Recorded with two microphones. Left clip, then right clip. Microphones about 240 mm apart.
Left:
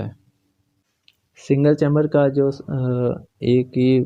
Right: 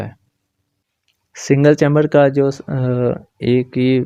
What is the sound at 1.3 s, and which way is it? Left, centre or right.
Speech, right.